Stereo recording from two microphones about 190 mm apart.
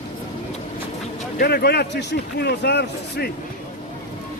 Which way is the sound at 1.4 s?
55° left (ahead or behind).